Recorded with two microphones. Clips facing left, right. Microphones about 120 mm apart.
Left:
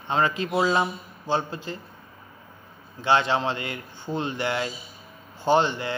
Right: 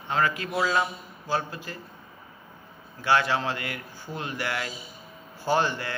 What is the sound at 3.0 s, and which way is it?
A man's voice, 25° left (ahead or behind).